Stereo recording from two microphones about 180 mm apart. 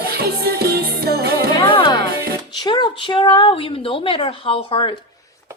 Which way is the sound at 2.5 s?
25° left (ahead or behind).